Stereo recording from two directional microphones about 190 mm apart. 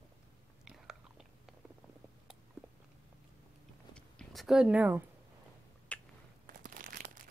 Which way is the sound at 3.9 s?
Centre (ahead or behind).